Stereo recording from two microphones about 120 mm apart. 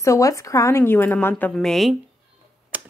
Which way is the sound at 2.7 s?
10° right (ahead or behind).